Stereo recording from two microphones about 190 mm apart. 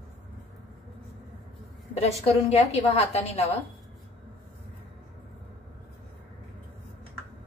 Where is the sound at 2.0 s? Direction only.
35° left (ahead or behind).